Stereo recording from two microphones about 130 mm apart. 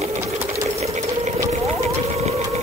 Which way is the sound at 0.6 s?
55° right (ahead or behind).